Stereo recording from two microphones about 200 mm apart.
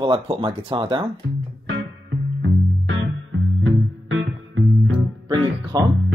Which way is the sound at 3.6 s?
80° right.